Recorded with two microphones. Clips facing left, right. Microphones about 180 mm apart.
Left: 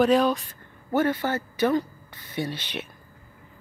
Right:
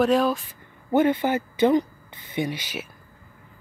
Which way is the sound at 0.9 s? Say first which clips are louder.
Right 4 dB; 20° right (ahead or behind).